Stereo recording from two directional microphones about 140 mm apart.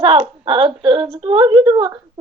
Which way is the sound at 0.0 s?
40° right (ahead or behind).